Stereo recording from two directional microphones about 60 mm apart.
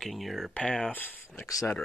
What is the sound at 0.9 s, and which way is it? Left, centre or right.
Speech, left.